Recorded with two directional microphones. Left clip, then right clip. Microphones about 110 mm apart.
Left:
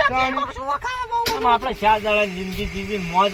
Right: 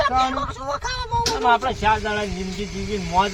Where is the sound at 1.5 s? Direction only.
25° right (ahead or behind).